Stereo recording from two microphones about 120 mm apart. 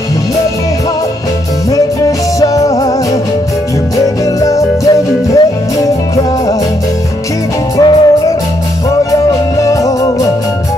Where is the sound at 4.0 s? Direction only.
30° left (ahead or behind).